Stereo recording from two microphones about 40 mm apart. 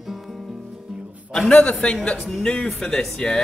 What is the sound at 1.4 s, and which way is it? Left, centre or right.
A man's voice, left.